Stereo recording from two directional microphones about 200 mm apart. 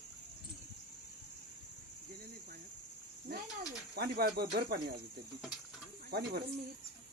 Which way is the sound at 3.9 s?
50° right (ahead or behind).